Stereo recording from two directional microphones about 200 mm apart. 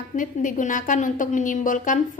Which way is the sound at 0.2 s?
40° left (ahead or behind).